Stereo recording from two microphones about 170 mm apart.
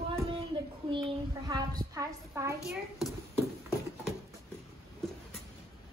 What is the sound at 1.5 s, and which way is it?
A woman's voice, 25° right (ahead or behind).